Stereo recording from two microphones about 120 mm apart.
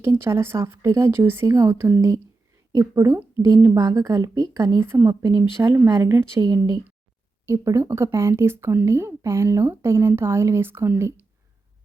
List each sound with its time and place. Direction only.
0.0 s speech: 20° right (ahead or behind)
5.0 s speech: 35° right (ahead or behind)
5.6 s speech: 20° right (ahead or behind)